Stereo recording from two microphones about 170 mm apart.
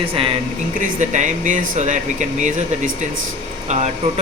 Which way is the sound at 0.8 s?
45° right (ahead or behind).